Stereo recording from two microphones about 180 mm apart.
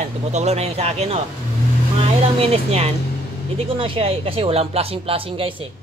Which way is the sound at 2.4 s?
35° right (ahead or behind).